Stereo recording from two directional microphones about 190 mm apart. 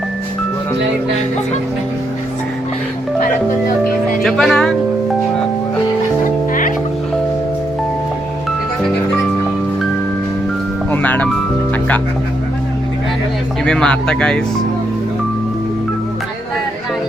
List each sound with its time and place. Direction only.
4.2 s music: centre (ahead or behind)
6.5 s music: 45° left (ahead or behind)
10.9 s speech: 10° left (ahead or behind)
13.7 s speech: 5° left (ahead or behind)